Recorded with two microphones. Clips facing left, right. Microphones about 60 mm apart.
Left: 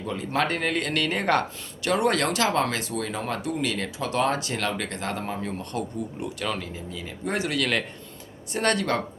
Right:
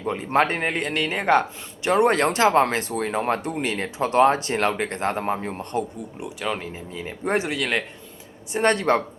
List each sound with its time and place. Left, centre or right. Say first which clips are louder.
0.0 s a man's voice: right 5 dB; right; by 1.9 s centre
1.9 s speech: right 4 dB; right
6.1 s speech: right 4 dB; centre
6.6 s a man's voice: right 2 dB; right; by 7.9 s centre
8.5 s a man's voice: right 4 dB; right